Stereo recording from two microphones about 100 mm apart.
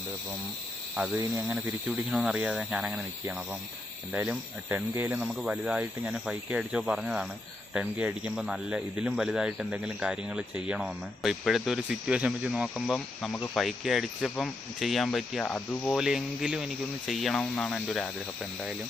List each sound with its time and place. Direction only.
0.9 s speech: 10° right (ahead or behind)
4.1 s speech: 15° right (ahead or behind)
13.3 s speech: 15° left (ahead or behind)
13.6 s speech: centre (ahead or behind)
15.5 s speech: 15° left (ahead or behind)
15.9 s speech: 5° right (ahead or behind)